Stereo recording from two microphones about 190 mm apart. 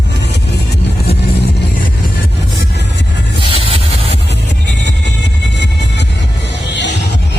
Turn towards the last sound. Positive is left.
turn(degrees=65)  # may be behind; listen again after turning